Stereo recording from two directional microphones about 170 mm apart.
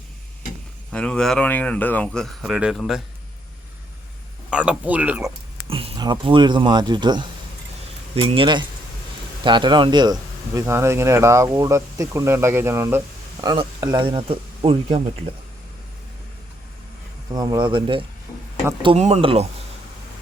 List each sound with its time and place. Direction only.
0.9 s speech: 5° left (ahead or behind)
4.4 s speech: 5° right (ahead or behind)
5.6 s speech: 35° right (ahead or behind)
8.3 s speech: 30° right (ahead or behind)
17.3 s speech: 25° right (ahead or behind)